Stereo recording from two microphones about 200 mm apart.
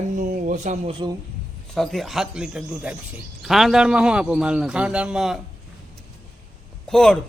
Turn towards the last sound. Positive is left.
turn(degrees=0)  # may be behind; listen again after turning